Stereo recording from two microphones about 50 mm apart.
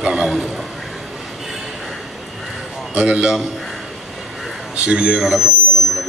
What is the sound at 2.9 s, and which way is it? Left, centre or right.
Speech, right.